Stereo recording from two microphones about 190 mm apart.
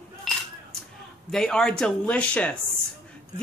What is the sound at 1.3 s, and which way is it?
Speech, 5° left (ahead or behind).